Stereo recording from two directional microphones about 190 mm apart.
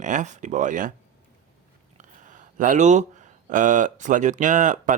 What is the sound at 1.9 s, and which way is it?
Speech, 40° right (ahead or behind).